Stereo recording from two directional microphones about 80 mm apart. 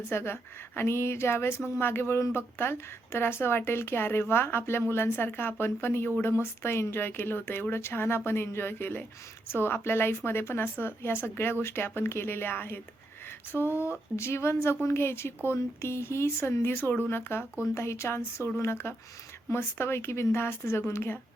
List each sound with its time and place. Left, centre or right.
0.1 s a woman's voice: left